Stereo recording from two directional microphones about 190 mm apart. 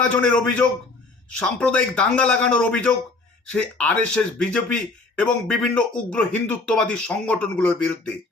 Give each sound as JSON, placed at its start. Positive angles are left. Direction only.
{"t": 0.1, "sound": "a man's voice", "side_deg": 5}